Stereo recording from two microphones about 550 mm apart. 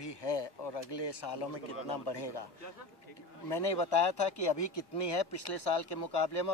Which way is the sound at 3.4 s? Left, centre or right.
Left.